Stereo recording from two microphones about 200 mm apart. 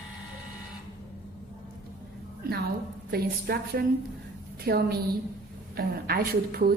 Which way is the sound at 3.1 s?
50° right (ahead or behind).